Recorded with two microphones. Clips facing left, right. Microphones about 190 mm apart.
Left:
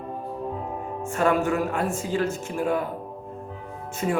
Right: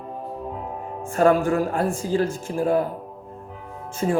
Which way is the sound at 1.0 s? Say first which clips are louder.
Right 4 dB; 35° right (ahead or behind).